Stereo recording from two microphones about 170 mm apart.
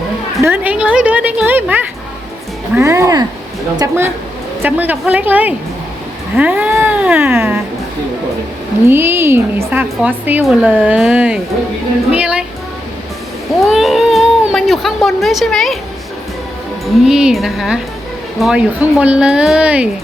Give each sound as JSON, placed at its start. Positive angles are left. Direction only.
{"t": 0.4, "sound": "speech", "side_deg": -10}
{"t": 8.9, "sound": "speech", "side_deg": -15}
{"t": 13.7, "sound": "speech", "side_deg": 0}
{"t": 17.1, "sound": "speech", "side_deg": -5}